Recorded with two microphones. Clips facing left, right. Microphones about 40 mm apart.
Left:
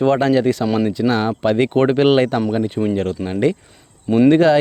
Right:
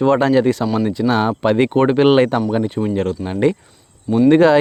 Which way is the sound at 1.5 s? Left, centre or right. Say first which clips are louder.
Right 1 dB; centre.